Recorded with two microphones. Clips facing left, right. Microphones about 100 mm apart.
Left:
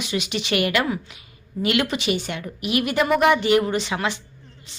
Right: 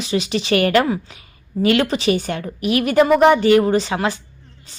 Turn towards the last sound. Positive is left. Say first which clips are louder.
# right 6 dB
turn(degrees=-35)  # may be behind; listen again after turning